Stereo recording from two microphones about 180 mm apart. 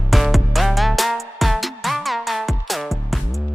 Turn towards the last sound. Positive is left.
turn(degrees=0)  # may be behind; listen again after turning